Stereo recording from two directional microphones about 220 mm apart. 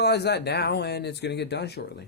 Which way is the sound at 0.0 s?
50° left (ahead or behind).